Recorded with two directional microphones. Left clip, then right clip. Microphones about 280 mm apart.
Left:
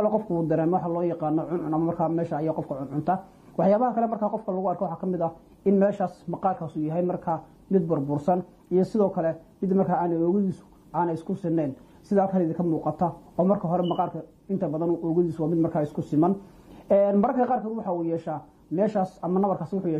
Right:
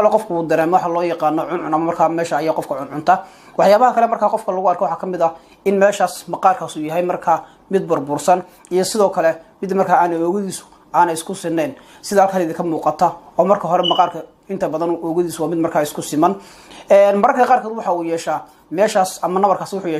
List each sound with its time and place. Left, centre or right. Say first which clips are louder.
0.1 s speech: right 9 dB; right